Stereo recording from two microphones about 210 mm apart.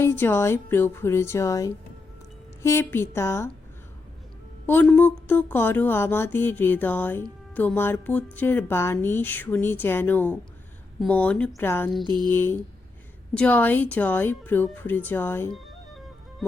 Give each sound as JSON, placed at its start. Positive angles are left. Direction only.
{"t": 0.0, "sound": "speech", "side_deg": 10}
{"t": 4.6, "sound": "speech", "side_deg": 10}
{"t": 12.0, "sound": "a sound", "side_deg": -20}
{"t": 12.3, "sound": "speech", "side_deg": 10}
{"t": 15.5, "sound": "music", "side_deg": 0}